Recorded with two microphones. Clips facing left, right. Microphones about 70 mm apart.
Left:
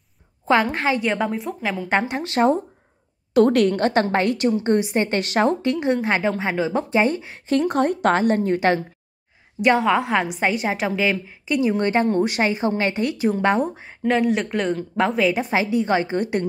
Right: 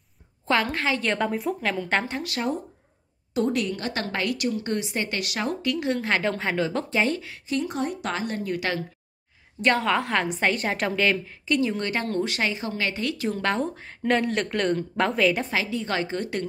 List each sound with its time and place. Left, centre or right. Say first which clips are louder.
0.5 s a woman's voice: left 5 dB; left
1.0 s a woman's voice: left 2 dB; centre
2.2 s speech: left 10 dB; left
3.3 s a woman's voice: left 9 dB; left
4.0 s a woman's voice: left 7 dB; left
7.4 s a woman's voice: left 8 dB; left
9.6 s a woman's voice: left 5 dB; centre
15.5 s a woman's voice: left 7 dB; left